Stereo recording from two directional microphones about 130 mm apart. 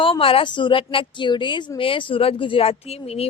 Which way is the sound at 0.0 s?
45° left (ahead or behind).